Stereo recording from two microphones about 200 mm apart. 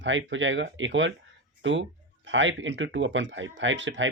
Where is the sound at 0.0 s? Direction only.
70° right (ahead or behind).